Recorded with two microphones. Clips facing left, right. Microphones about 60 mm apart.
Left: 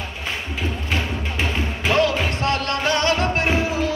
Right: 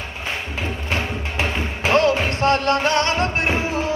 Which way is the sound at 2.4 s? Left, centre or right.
Right.